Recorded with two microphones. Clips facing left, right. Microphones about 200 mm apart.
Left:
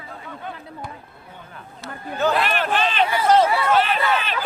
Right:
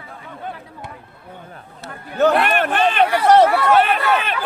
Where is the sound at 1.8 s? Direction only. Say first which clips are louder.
Right 5 dB; 65° right (ahead or behind).